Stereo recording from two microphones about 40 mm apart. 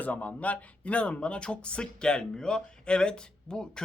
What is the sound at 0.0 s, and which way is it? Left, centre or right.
Speech, left.